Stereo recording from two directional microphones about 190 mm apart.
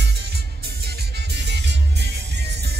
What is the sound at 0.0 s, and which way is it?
Music, 60° right (ahead or behind).